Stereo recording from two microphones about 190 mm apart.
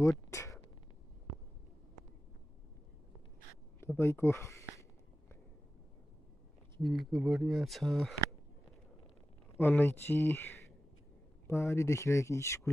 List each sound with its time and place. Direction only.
0.3 s a sound: 15° left (ahead or behind)
3.8 s speech: 15° left (ahead or behind)
6.8 s speech: centre (ahead or behind)
9.6 s speech: 10° left (ahead or behind)